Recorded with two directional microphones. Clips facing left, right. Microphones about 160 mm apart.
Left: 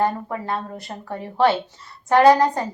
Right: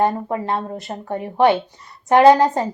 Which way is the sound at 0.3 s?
25° right (ahead or behind).